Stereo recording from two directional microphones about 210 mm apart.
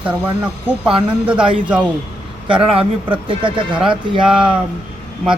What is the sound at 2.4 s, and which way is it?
A man's voice, 25° right (ahead or behind).